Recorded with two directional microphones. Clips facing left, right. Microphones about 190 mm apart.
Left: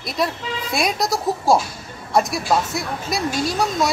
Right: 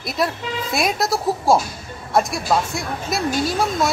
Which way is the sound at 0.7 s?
Centre (ahead or behind).